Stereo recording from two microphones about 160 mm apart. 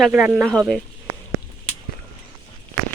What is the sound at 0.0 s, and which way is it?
Speech, 5° right (ahead or behind).